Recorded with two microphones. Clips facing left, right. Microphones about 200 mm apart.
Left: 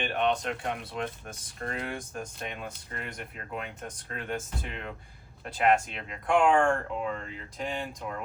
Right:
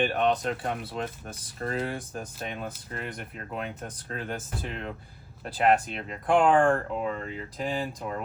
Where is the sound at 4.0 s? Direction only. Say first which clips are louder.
Left 1 dB; 35° right (ahead or behind).